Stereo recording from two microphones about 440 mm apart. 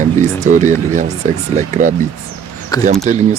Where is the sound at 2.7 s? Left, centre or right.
Centre.